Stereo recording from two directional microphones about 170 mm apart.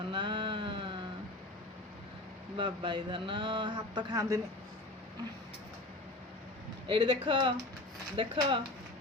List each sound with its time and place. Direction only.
0.1 s a sound: 30° right (ahead or behind)
2.6 s speech: 30° right (ahead or behind)
6.8 s speech: 30° right (ahead or behind)